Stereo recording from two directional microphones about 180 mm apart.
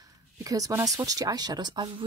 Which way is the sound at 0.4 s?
20° right (ahead or behind).